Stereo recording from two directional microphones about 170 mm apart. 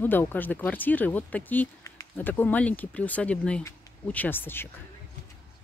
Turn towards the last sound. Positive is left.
turn(degrees=10)  # may be behind; listen again after turning